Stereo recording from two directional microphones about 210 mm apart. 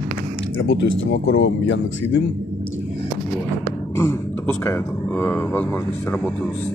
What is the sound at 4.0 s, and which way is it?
A man's voice, 15° left (ahead or behind).